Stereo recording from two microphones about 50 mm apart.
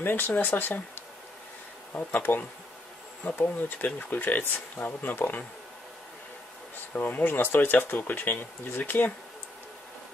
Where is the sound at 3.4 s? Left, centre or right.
Left.